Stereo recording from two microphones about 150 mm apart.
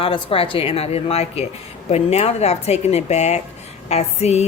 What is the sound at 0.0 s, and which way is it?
Speech, 40° left (ahead or behind).